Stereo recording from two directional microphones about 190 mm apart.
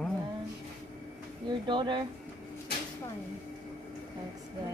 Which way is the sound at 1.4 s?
25° right (ahead or behind).